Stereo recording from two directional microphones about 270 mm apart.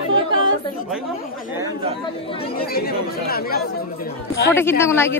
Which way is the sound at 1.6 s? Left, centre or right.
Centre.